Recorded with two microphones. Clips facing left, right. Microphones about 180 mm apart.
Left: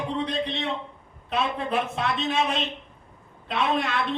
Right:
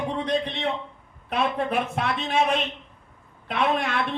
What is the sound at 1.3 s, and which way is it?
A man's voice, 55° right (ahead or behind).